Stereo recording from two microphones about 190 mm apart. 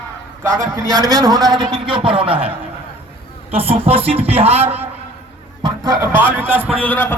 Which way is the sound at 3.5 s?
30° right (ahead or behind).